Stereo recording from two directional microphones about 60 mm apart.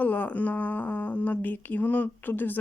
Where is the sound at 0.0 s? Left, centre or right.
Left.